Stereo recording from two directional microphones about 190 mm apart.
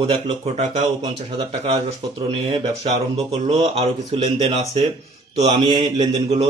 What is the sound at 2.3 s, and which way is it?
Mantra, 30° right (ahead or behind).